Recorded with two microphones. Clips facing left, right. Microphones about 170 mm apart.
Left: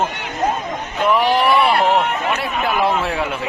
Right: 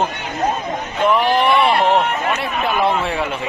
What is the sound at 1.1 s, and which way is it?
A man's voice, centre (ahead or behind).